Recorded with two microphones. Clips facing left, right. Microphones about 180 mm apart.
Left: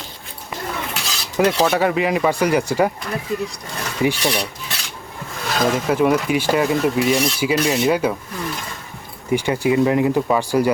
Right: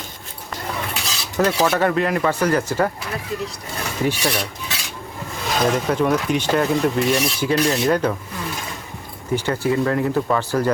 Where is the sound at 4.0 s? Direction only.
10° left (ahead or behind).